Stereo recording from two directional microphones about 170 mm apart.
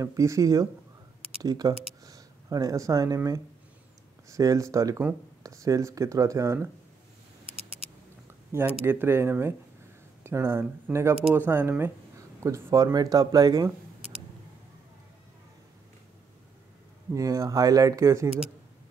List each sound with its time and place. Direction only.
0.0 s speech: 20° right (ahead or behind)
2.0 s a sound: 20° right (ahead or behind)
4.3 s speech: 20° right (ahead or behind)
8.5 s speech: 15° right (ahead or behind)
17.1 s speech: 20° right (ahead or behind)